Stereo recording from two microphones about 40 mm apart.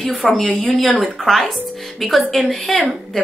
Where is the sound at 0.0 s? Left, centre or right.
Centre.